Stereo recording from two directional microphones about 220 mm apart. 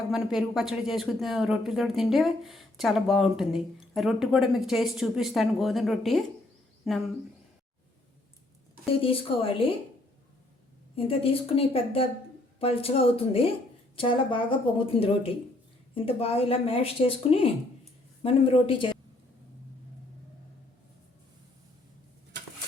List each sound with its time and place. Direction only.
0.1 s speech: centre (ahead or behind)
8.9 s speech: 25° left (ahead or behind)
10.9 s speech: 25° left (ahead or behind)